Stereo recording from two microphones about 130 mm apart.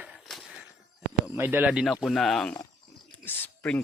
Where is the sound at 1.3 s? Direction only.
15° right (ahead or behind); by 2.5 s centre (ahead or behind).